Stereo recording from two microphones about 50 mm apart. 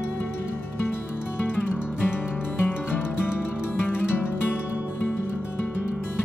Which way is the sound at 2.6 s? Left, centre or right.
Left.